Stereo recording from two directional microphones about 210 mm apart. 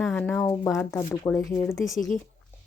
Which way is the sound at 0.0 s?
5° left (ahead or behind).